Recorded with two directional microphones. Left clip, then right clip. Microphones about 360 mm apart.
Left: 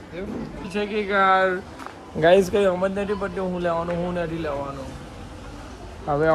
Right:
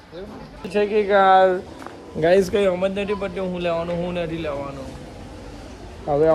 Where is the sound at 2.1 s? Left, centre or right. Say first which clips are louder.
Even; centre.